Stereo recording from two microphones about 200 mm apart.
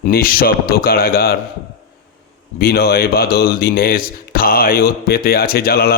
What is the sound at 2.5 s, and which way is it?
Speech, 50° left (ahead or behind).